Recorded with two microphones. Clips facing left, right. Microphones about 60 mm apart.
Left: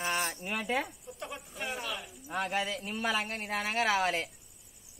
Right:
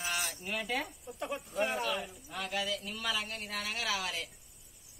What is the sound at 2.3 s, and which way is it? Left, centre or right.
A man's voice, left.